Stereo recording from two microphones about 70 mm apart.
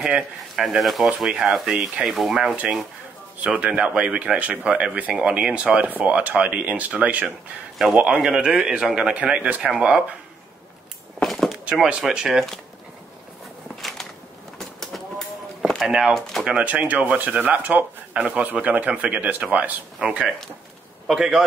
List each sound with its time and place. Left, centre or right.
0.6 s speech: centre
2.5 s speech: centre
11.2 s a sound: centre
11.7 s speech: centre
13.7 s a sound: centre
16.1 s speech: centre
16.4 s speech: centre